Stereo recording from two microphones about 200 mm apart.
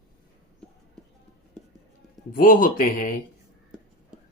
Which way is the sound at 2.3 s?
45° left (ahead or behind).